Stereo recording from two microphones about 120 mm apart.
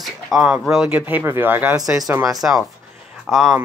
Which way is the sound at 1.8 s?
30° right (ahead or behind).